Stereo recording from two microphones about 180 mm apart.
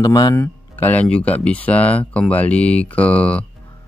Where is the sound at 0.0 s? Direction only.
20° left (ahead or behind).